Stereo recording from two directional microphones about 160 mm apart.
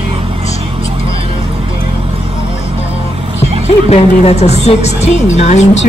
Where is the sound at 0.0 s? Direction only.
35° right (ahead or behind).